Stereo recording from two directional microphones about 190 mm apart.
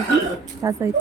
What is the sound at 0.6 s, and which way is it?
Speech, 15° right (ahead or behind).